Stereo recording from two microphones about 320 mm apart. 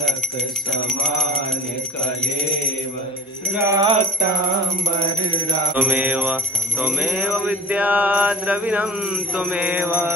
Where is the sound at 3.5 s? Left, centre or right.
Centre.